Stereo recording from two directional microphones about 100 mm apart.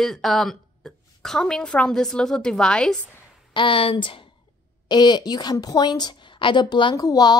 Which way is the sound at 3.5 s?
60° left (ahead or behind).